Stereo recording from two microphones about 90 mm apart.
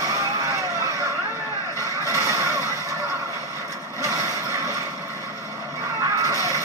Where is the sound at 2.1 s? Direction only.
30° right (ahead or behind).